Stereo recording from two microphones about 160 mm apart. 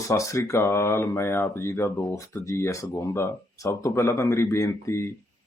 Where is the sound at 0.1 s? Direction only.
20° left (ahead or behind).